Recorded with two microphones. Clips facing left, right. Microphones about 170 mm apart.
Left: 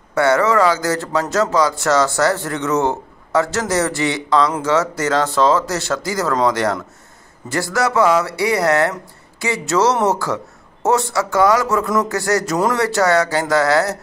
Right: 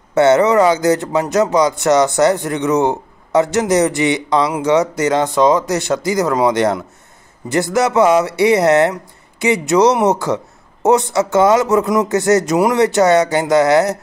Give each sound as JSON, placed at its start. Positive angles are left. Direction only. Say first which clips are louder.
{"t": 0.1, "sound": "speech", "louder": "right 4 dB", "side_deg": -20}